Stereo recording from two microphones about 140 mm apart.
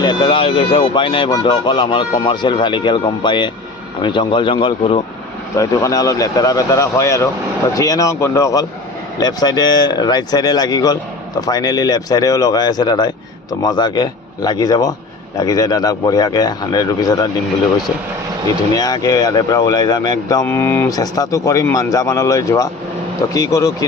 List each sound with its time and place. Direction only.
0.0 s speech: 35° left (ahead or behind)
5.5 s speech: 25° left (ahead or behind)
18.7 s speech: 25° left (ahead or behind)